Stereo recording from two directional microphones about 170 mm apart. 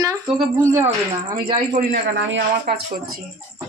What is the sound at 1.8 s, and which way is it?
Speech, 80° right.